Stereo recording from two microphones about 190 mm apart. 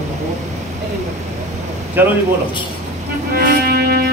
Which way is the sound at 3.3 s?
50° right (ahead or behind).